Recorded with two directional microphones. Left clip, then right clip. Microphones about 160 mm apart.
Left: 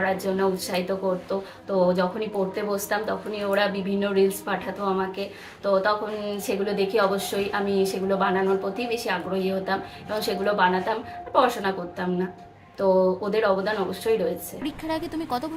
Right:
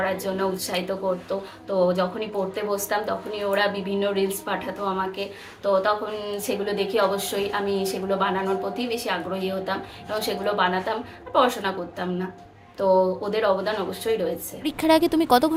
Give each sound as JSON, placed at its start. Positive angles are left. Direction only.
{"t": 0.0, "sound": "a woman's voice", "side_deg": -10}
{"t": 14.6, "sound": "speech", "side_deg": -40}